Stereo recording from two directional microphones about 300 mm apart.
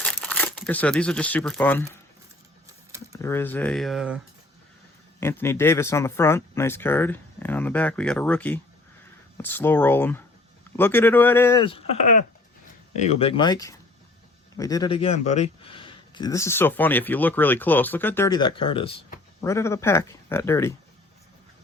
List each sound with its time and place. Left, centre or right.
0.0 s speech: centre
3.1 s speech: centre
5.2 s speech: centre